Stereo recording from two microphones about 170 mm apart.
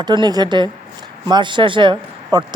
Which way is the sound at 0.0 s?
25° right (ahead or behind).